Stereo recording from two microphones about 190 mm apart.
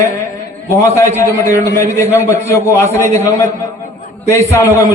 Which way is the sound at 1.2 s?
15° left (ahead or behind).